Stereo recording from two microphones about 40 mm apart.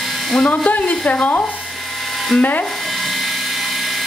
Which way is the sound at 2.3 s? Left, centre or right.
Centre.